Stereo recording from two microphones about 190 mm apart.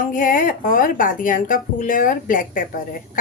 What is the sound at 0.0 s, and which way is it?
Speech, 45° left (ahead or behind).